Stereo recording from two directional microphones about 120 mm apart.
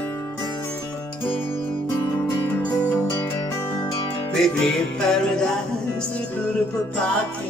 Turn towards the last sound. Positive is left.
turn(degrees=10)  # may be behind; listen again after turning